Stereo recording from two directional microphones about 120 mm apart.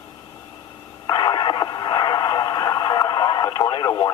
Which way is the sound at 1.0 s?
40° left (ahead or behind).